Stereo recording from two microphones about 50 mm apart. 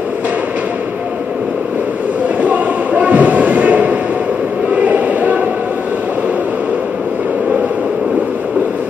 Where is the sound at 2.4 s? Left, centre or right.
Right.